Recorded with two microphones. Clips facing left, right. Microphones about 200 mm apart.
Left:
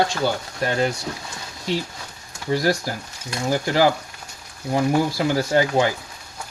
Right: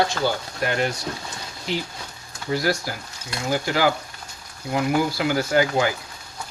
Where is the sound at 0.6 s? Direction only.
30° left (ahead or behind).